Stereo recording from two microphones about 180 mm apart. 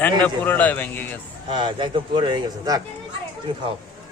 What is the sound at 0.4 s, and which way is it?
Speech, 10° left (ahead or behind).